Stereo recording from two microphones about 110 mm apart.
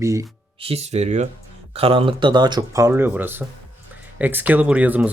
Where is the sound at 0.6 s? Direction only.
70° right (ahead or behind); by 1.3 s 90° right.